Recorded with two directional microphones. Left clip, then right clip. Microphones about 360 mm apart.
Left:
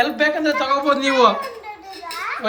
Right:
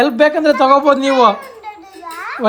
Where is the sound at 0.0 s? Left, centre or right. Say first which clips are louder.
Right 6 dB; centre.